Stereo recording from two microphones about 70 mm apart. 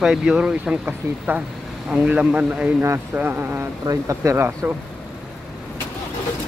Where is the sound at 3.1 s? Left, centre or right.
Right.